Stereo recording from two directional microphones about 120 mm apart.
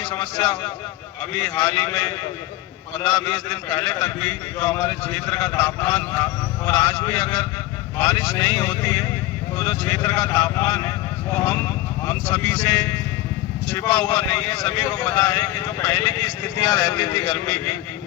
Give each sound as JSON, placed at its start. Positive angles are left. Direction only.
{"t": 0.0, "sound": "speech", "side_deg": 35}
{"t": 1.7, "sound": "a man's voice", "side_deg": 20}
{"t": 3.0, "sound": "a man's voice", "side_deg": 35}
{"t": 4.0, "sound": "a man's voice", "side_deg": 15}
{"t": 4.6, "sound": "a man's voice", "side_deg": 25}